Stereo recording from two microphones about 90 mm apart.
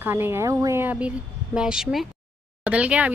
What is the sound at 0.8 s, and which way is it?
A woman's voice, 15° right (ahead or behind).